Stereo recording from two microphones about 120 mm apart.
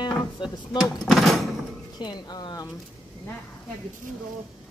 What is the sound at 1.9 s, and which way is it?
Speech, 40° left (ahead or behind).